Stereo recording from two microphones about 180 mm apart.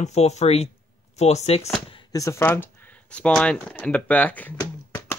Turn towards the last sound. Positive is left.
turn(degrees=15)  # may be behind; listen again after turning